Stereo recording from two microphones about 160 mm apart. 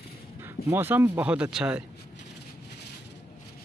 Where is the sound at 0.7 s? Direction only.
15° right (ahead or behind).